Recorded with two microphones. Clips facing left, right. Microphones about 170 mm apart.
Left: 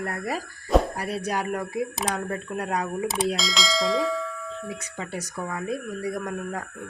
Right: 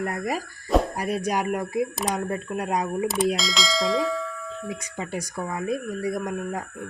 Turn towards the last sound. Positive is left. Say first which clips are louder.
# right 2 dB
turn(degrees=-15)  # may be behind; listen again after turning